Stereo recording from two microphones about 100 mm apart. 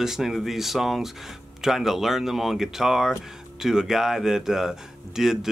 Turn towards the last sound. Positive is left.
turn(degrees=-5)  # may be behind; listen again after turning